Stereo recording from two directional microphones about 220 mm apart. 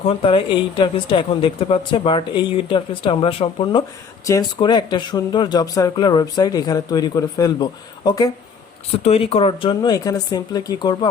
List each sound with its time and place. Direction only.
0.0 s a woman's voice: 25° left (ahead or behind)